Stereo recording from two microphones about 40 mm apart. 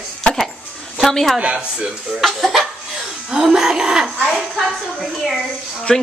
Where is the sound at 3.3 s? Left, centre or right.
Centre.